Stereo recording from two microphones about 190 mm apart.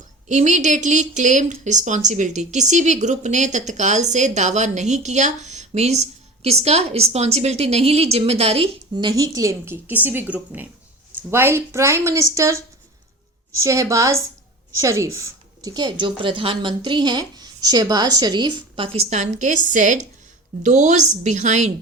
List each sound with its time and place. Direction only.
0.3 s a woman's voice: 40° right (ahead or behind)